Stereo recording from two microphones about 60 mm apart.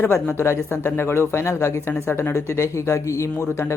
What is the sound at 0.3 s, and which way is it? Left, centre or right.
Speech, left.